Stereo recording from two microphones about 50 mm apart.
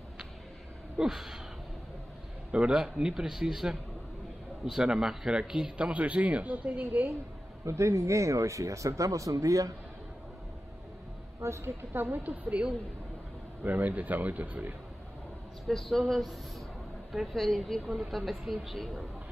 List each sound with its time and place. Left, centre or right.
0.9 s a man's voice: centre
2.5 s a man's voice: centre; by 7.2 s right
7.6 s speech: right
11.4 s a woman's voice: right
11.9 s speech: right
15.6 s speech: centre
17.8 s a man's voice: centre